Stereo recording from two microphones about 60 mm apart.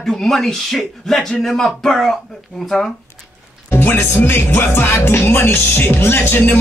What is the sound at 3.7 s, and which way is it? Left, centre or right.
Speech, left.